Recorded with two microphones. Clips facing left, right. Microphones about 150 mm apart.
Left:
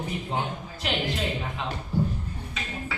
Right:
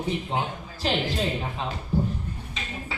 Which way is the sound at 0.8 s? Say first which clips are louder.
Right 4 dB; 35° right (ahead or behind).